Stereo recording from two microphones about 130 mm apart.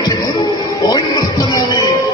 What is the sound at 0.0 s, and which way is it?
Music, 30° left (ahead or behind).